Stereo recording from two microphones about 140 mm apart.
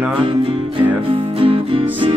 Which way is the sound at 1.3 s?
40° right (ahead or behind).